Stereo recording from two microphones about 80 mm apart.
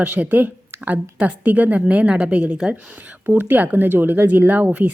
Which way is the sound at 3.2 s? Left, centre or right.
Right.